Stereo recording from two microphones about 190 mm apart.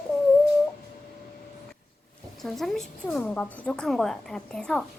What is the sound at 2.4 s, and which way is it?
A woman's voice, centre (ahead or behind).